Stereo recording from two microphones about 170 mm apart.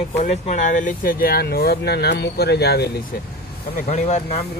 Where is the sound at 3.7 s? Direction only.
40° left (ahead or behind).